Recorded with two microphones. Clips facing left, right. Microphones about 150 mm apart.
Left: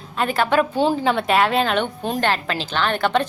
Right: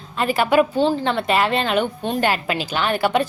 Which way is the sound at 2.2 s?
10° right (ahead or behind).